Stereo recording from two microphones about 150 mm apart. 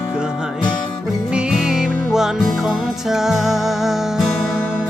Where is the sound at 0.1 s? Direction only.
5° right (ahead or behind).